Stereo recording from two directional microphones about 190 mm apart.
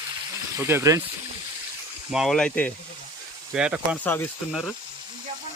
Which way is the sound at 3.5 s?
5° right (ahead or behind).